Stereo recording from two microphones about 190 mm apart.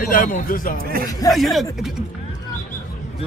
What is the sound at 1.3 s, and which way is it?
Speech, centre (ahead or behind).